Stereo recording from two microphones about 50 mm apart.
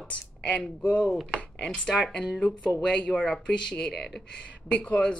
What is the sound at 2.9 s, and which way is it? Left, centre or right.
Speech, left.